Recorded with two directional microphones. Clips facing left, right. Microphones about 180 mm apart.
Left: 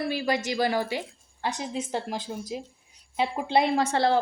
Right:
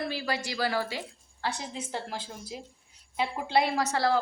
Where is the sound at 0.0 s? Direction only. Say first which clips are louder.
Left 5 dB; 15° left (ahead or behind).